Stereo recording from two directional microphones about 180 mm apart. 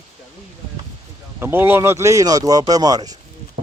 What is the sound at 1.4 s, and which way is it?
Speech, 10° right (ahead or behind).